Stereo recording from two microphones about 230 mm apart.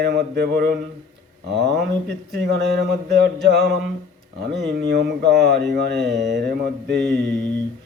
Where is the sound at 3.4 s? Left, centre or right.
Right.